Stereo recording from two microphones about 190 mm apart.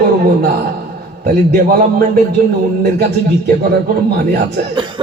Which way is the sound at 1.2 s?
60° right (ahead or behind).